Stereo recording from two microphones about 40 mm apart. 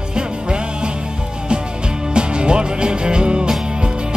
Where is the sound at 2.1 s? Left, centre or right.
Right.